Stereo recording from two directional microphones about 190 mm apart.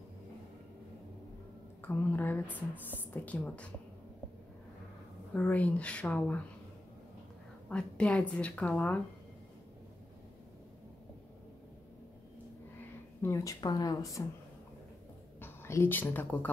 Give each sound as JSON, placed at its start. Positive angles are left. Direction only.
{"t": 1.8, "sound": "a sound", "side_deg": 10}
{"t": 3.0, "sound": "speech", "side_deg": 10}
{"t": 5.3, "sound": "speech", "side_deg": 10}
{"t": 7.7, "sound": "speech", "side_deg": 5}
{"t": 13.2, "sound": "speech", "side_deg": 15}
{"t": 15.4, "sound": "speech", "side_deg": 10}